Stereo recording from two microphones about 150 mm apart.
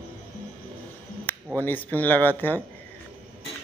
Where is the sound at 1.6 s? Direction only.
10° left (ahead or behind).